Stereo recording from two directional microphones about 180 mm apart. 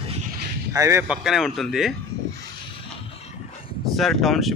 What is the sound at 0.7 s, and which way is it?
Speech, 15° right (ahead or behind).